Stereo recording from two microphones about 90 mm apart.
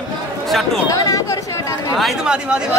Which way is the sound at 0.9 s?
40° left (ahead or behind).